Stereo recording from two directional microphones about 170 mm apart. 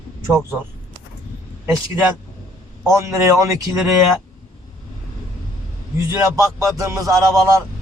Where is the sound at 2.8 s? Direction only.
20° right (ahead or behind).